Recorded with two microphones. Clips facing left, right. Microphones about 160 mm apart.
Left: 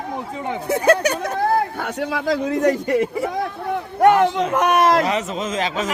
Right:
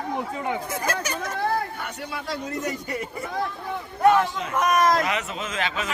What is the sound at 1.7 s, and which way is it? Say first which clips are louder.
A man's voice: left 9 dB; 90° left.